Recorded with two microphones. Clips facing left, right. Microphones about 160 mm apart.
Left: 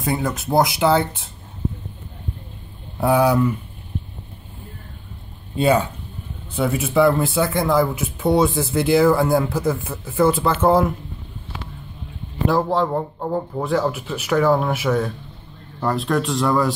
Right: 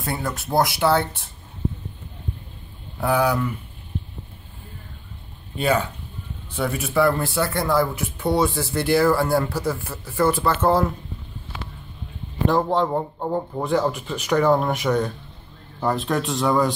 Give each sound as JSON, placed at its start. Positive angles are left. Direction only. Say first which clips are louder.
{"t": 0.0, "sound": "speech", "louder": "left 5 dB", "side_deg": 15}
{"t": 3.0, "sound": "speech", "louder": "left 4 dB", "side_deg": 25}
{"t": 5.6, "sound": "speech", "louder": "left 4 dB", "side_deg": 25}
{"t": 12.4, "sound": "speech", "louder": "left 1 dB", "side_deg": 5}